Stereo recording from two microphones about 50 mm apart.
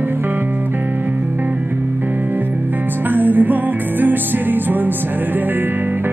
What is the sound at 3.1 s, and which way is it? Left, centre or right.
Music, right.